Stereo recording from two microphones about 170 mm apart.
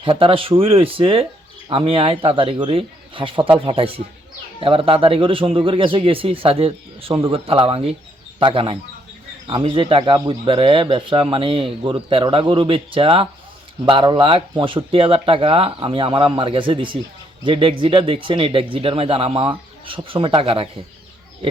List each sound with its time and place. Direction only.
0.0 s speech: 30° right (ahead or behind)